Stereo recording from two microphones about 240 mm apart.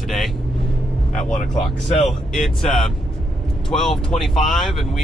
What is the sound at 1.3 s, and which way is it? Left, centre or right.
Speech, left.